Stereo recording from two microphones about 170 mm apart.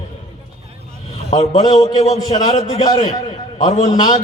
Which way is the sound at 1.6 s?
20° left (ahead or behind).